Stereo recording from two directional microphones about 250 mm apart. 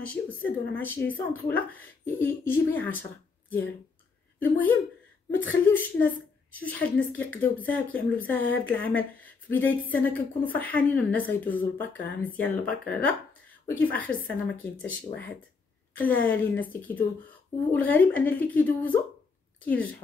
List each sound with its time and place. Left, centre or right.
0.0 s a woman's voice: centre